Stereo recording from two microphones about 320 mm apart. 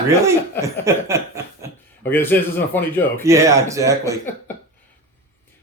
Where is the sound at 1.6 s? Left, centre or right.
Centre.